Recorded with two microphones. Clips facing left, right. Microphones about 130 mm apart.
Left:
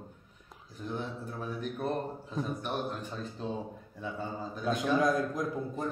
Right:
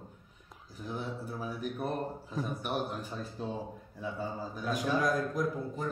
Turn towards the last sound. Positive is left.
turn(degrees=20)  # may be behind; listen again after turning